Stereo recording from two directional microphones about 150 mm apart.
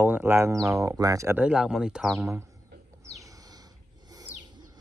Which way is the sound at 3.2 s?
25° right (ahead or behind).